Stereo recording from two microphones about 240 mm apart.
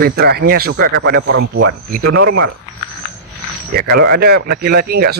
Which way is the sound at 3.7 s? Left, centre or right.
Right.